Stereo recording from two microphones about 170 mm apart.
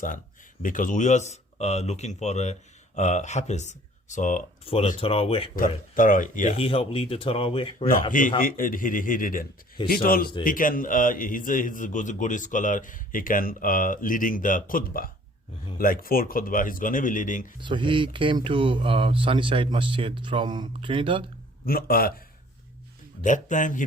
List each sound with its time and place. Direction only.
0.6 s a man's voice: 50° left (ahead or behind)
4.6 s speech: 35° left (ahead or behind)
5.5 s a man's voice: 50° left (ahead or behind)
6.6 s speech: 35° left (ahead or behind)
8.4 s a man's voice: 55° left (ahead or behind)
17.6 s speech: 30° right (ahead or behind)
21.7 s speech: 60° left (ahead or behind)
23.2 s a man's voice: 50° left (ahead or behind)